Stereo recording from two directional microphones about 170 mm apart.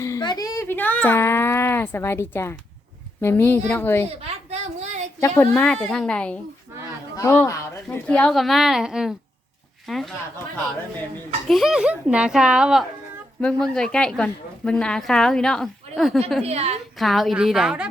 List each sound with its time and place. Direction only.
0.0 s speech: 20° left (ahead or behind)
4.2 s a sound: 40° right (ahead or behind)
5.2 s speech: 15° left (ahead or behind)
11.4 s speech: centre (ahead or behind)
16.4 s a woman's voice: 40° right (ahead or behind)
17.0 s speech: centre (ahead or behind)